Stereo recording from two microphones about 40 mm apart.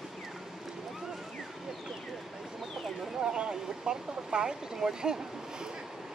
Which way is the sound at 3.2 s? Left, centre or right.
Right.